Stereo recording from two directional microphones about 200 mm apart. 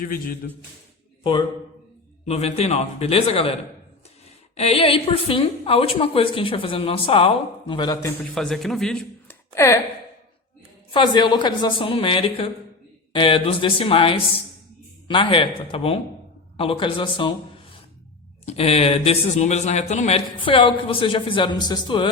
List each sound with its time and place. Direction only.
0.0 s a man's voice: 45° left (ahead or behind)
1.2 s a man's voice: 25° left (ahead or behind)
4.5 s speech: 30° left (ahead or behind)
8.2 s a man's voice: centre (ahead or behind)
9.6 s speech: 15° left (ahead or behind)
10.9 s a man's voice: 25° left (ahead or behind)
18.4 s speech: 30° left (ahead or behind)